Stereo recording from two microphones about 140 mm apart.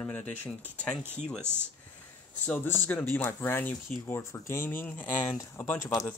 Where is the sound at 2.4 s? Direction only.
15° left (ahead or behind).